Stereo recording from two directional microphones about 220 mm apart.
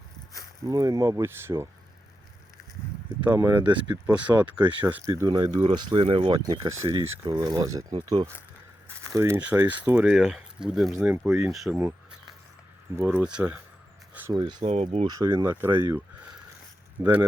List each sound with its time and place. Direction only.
0.7 s speech: 15° right (ahead or behind)
3.2 s speech: 10° right (ahead or behind)
9.1 s speech: 10° right (ahead or behind)
11.5 s speech: centre (ahead or behind)
13.0 s speech: 10° right (ahead or behind)
14.3 s speech: 25° right (ahead or behind)
15.0 s speech: 15° right (ahead or behind)
17.0 s speech: 5° right (ahead or behind)